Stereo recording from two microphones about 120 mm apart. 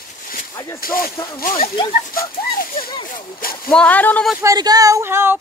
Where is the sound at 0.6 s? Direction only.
25° left (ahead or behind).